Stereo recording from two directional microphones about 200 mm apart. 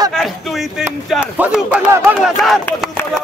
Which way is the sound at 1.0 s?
5° right (ahead or behind).